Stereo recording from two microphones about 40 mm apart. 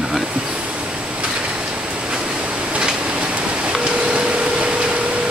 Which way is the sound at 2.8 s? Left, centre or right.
Right.